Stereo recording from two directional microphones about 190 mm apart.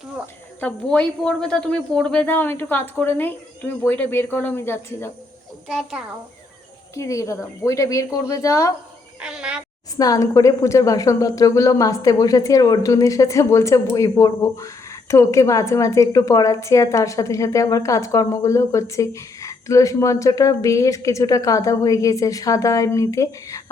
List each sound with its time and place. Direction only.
0.6 s a woman's voice: 5° left (ahead or behind)
5.6 s a child's voice: centre (ahead or behind)
6.9 s a woman's voice: 15° left (ahead or behind)
9.2 s speech: 5° right (ahead or behind)
10.0 s a woman's voice: 20° left (ahead or behind)